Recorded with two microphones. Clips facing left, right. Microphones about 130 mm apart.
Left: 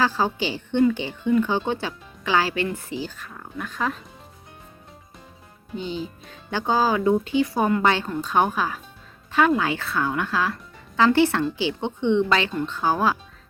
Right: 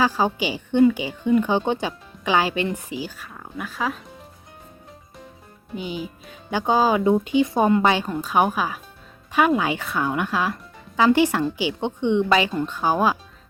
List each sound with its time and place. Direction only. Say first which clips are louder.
0.0 s speech: right 2 dB; 15° right (ahead or behind)
5.7 s speech: even; 10° right (ahead or behind)